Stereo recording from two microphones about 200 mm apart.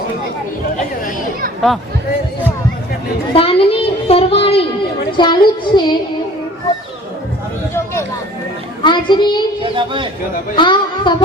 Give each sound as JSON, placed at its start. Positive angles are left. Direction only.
{"t": 3.3, "sound": "a sound", "side_deg": 30}
{"t": 5.1, "sound": "child singing", "side_deg": 25}
{"t": 7.7, "sound": "a sound", "side_deg": 15}
{"t": 8.8, "sound": "a child's voice", "side_deg": 25}
{"t": 9.7, "sound": "speech", "side_deg": -25}
{"t": 10.5, "sound": "a woman's voice", "side_deg": 25}